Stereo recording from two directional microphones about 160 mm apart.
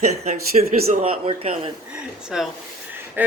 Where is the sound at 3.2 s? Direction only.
10° right (ahead or behind).